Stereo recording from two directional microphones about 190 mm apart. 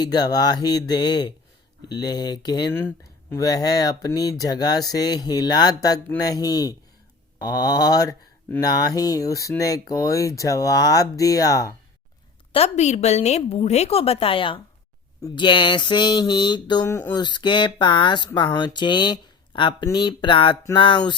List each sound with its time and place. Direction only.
0.0 s speech: 20° left (ahead or behind)
12.5 s a woman's voice: 35° left (ahead or behind); by 17.2 s 10° left (ahead or behind)
17.2 s speech: 25° left (ahead or behind)